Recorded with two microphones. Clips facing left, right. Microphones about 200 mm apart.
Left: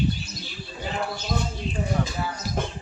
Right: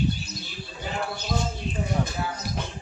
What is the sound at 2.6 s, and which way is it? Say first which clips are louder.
Music: left 9 dB; 50° left (ahead or behind).